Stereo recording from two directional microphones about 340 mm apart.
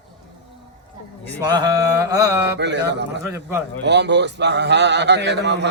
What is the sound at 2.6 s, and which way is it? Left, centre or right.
Speech, right.